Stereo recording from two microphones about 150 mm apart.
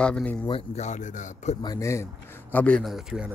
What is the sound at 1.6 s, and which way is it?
Speech, 25° left (ahead or behind).